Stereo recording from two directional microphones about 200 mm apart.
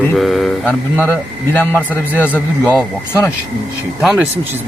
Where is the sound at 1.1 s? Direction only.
10° left (ahead or behind).